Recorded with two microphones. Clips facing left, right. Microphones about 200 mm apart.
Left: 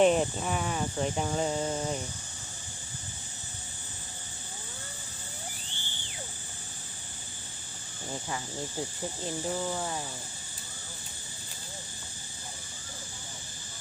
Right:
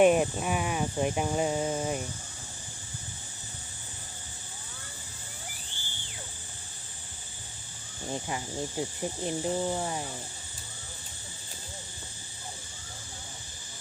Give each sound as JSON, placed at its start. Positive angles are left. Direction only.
{"t": 0.0, "sound": "speech", "side_deg": -10}
{"t": 8.1, "sound": "speech", "side_deg": -20}